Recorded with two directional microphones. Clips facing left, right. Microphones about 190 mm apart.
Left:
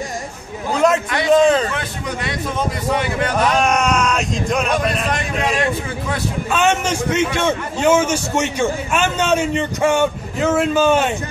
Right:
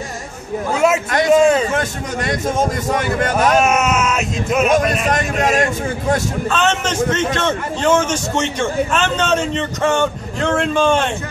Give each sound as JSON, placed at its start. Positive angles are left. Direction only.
{"t": 0.7, "sound": "a sound", "side_deg": -5}
{"t": 1.7, "sound": "a man's voice", "side_deg": -45}
{"t": 3.5, "sound": "speech", "side_deg": -5}
{"t": 5.1, "sound": "a man's voice", "side_deg": -45}
{"t": 6.5, "sound": "a man's voice", "side_deg": 10}